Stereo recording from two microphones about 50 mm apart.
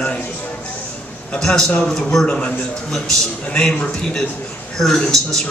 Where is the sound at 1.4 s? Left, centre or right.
Centre.